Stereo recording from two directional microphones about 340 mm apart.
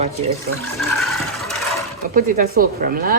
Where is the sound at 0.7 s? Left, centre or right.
Centre.